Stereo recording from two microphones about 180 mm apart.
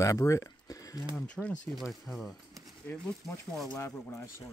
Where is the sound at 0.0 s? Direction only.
15° left (ahead or behind).